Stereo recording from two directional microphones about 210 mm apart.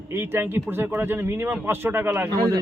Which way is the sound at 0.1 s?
10° right (ahead or behind).